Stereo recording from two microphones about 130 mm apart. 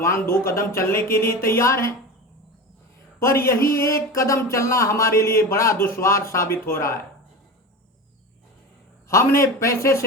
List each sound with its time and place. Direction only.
0.0 s speech: 20° left (ahead or behind)
3.2 s speech: 20° left (ahead or behind)
9.0 s speech: 20° left (ahead or behind)